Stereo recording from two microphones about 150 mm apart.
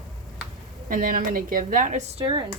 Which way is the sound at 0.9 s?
65° right (ahead or behind).